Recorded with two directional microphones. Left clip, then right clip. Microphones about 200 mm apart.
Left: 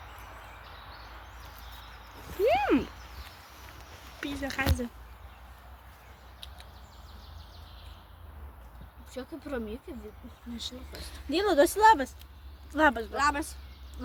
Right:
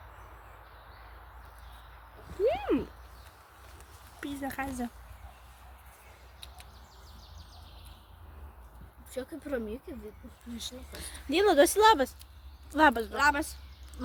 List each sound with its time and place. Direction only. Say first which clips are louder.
2.5 s a sound: left 6 dB; 15° left (ahead or behind)
4.2 s speech: left 4 dB; 25° right (ahead or behind)
9.1 s speech: right 1 dB; 25° right (ahead or behind)
10.9 s a woman's voice: right 2 dB; 40° right (ahead or behind)